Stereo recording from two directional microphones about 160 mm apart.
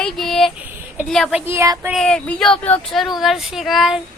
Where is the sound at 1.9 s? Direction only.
5° left (ahead or behind).